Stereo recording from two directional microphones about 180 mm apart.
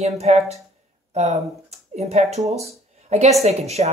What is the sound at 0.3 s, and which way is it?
Speech, 40° right (ahead or behind).